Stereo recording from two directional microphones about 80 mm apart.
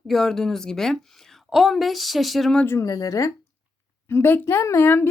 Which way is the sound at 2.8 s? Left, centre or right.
Left.